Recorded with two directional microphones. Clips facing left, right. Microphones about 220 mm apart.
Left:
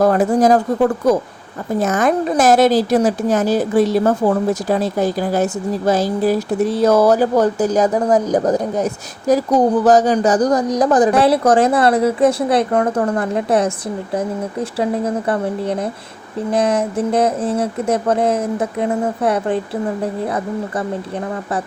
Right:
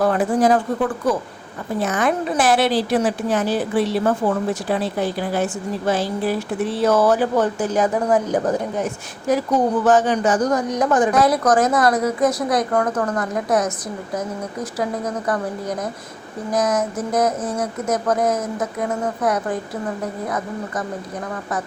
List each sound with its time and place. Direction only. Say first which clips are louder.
0.0 s a woman's voice: left 4 dB; 40° left (ahead or behind)